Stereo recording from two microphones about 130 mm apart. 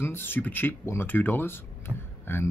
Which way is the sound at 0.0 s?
15° left (ahead or behind).